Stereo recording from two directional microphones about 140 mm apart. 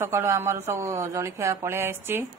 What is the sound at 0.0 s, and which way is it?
Speech, 20° right (ahead or behind).